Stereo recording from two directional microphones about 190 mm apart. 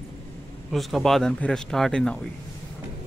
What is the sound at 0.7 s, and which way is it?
Speech, centre (ahead or behind).